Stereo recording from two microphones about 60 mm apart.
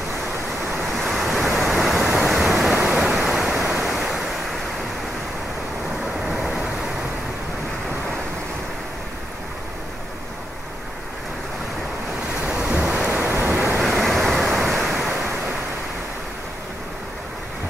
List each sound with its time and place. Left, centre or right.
0.9 s waves: centre
6.2 s vehicle: centre
12.8 s thunder: right
13.3 s waves: right
13.8 s waves: centre